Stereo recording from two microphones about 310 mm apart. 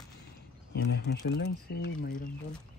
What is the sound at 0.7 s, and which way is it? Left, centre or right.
Speech, left.